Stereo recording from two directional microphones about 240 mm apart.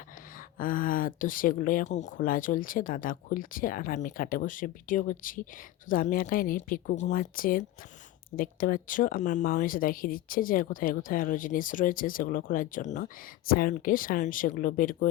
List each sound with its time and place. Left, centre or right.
0.6 s speech: left